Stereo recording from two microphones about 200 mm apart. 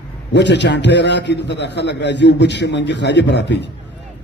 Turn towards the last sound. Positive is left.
turn(degrees=60)  # may be behind; listen again after turning